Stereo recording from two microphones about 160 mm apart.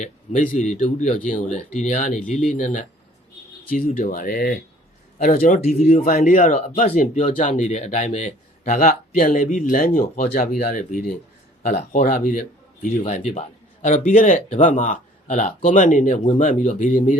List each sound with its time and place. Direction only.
0.0 s speech: 55° left (ahead or behind)
5.5 s speech: 40° left (ahead or behind)
6.1 s speech: 55° left (ahead or behind)
13.0 s speech: 45° left (ahead or behind)